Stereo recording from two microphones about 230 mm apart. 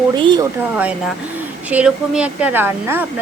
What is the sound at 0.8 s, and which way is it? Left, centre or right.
Speech, centre.